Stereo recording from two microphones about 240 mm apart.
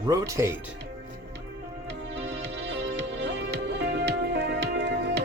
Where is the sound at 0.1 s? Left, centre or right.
Centre.